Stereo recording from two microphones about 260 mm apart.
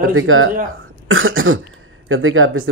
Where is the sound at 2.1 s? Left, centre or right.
Right.